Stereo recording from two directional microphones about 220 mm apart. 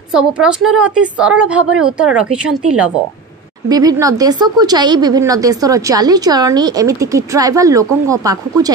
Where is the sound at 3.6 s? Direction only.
15° right (ahead or behind).